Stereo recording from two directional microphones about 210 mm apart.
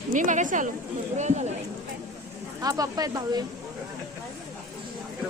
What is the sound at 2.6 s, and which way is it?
Speech, 15° right (ahead or behind).